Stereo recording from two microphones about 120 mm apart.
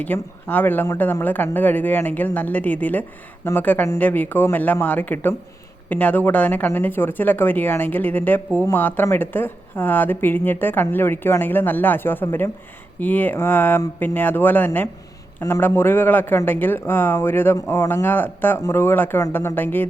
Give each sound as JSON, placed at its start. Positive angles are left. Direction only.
{"t": 0.0, "sound": "speech", "side_deg": 15}